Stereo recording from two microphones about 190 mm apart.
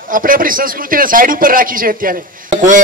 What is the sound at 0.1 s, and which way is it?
A man's voice, 45° right (ahead or behind).